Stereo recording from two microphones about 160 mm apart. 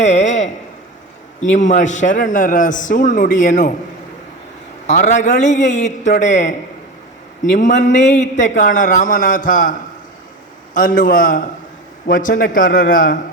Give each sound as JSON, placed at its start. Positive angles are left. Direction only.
{"t": 0.0, "sound": "a sound", "side_deg": 45}
{"t": 1.4, "sound": "a man's voice", "side_deg": 50}
{"t": 4.9, "sound": "a man's voice", "side_deg": 45}
{"t": 7.5, "sound": "a man's voice", "side_deg": 50}
{"t": 10.8, "sound": "a man's voice", "side_deg": 55}